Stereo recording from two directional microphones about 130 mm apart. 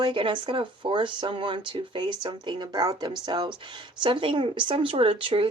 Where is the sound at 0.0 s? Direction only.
40° right (ahead or behind).